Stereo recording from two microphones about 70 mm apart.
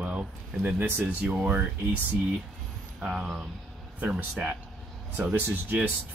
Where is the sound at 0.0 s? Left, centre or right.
Centre.